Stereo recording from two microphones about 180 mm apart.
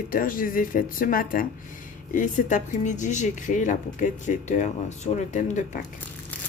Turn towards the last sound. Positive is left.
turn(degrees=45)  # may be behind; listen again after turning